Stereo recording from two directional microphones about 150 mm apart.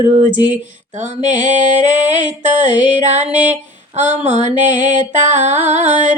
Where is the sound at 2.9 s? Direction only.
50° right (ahead or behind).